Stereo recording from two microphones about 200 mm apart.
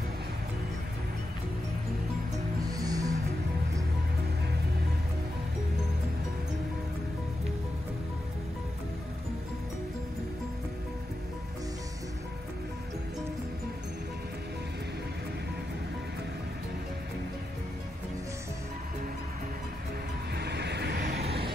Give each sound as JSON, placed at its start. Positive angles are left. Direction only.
{"t": 2.8, "sound": "music", "side_deg": -20}
{"t": 20.3, "sound": "vehicle", "side_deg": -55}